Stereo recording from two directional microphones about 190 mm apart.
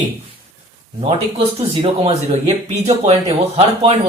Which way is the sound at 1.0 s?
30° right (ahead or behind).